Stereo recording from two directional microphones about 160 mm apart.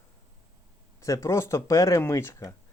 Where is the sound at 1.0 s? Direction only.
20° left (ahead or behind).